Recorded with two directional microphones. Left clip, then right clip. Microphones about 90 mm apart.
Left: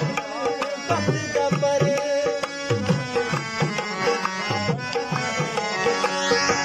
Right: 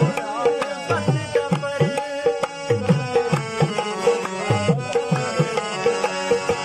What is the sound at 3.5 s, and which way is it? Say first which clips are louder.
Music: right 3 dB; 35° right (ahead or behind).